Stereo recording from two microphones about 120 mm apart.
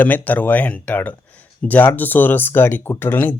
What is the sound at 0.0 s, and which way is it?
Speech, 15° left (ahead or behind).